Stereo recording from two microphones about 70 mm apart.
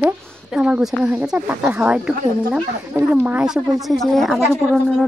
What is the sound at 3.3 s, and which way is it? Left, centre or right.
Speech, centre.